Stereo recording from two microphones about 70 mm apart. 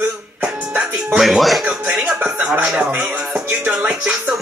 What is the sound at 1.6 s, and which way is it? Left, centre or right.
Music, centre.